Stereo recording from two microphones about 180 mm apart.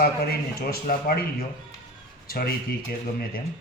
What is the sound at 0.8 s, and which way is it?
Speech, 50° left (ahead or behind).